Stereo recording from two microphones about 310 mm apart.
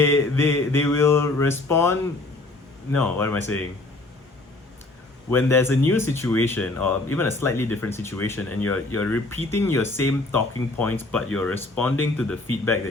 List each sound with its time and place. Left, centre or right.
0.0 s speech: centre
5.3 s speech: centre